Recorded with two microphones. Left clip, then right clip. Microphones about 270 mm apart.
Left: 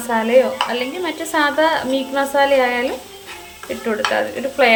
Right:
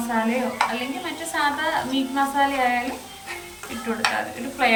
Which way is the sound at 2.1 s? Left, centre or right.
Centre.